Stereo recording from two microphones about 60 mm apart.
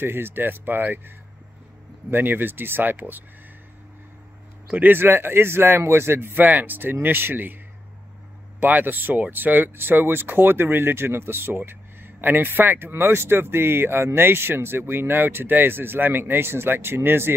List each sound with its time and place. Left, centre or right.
0.0 s speech: right
4.6 s speech: right
8.5 s speech: right